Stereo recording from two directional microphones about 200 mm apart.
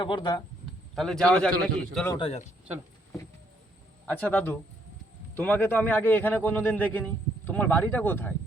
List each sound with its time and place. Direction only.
0.0 s speech: 25° left (ahead or behind)
0.9 s a man's voice: centre (ahead or behind)
2.1 s speech: 30° left (ahead or behind)
4.0 s a man's voice: 10° left (ahead or behind)